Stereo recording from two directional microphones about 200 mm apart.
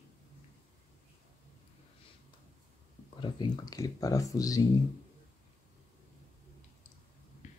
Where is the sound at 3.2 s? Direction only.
20° left (ahead or behind).